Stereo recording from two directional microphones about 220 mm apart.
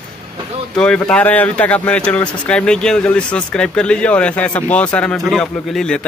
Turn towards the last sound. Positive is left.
turn(degrees=5)  # may be behind; listen again after turning